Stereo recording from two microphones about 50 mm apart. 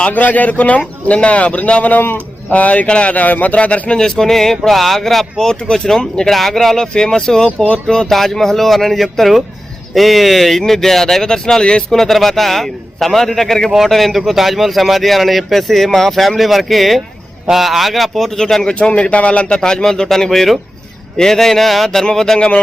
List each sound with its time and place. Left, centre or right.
0.1 s a man's voice: left
3.9 s speech: centre
18.7 s speech: left
22.4 s speech: centre